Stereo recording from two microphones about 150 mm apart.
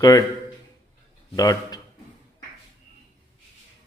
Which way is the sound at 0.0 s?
25° left (ahead or behind).